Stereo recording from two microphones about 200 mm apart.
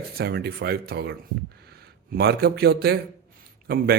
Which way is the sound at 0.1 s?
50° right (ahead or behind).